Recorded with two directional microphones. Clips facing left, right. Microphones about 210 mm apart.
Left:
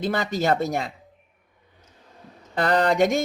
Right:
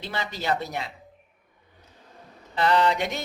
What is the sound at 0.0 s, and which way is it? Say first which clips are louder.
Speech: left 8 dB; 45° left (ahead or behind).